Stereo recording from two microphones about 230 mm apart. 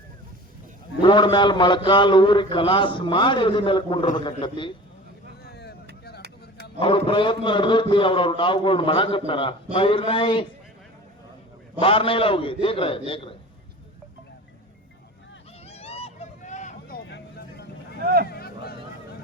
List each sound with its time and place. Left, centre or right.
1.0 s a man's voice: centre
5.5 s vehicle: left
6.7 s a man's voice: left
11.8 s a man's voice: left
15.6 s vehicle: left
17.1 s vehicle: left
18.0 s a sound: right
18.3 s a sound: left